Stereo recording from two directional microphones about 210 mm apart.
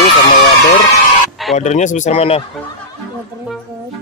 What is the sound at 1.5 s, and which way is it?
Speech, 35° left (ahead or behind).